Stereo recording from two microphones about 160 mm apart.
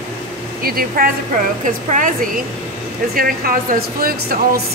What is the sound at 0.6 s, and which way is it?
Speech, 65° right (ahead or behind).